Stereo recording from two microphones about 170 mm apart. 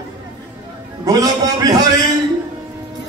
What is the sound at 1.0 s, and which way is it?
Mantra, 20° right (ahead or behind).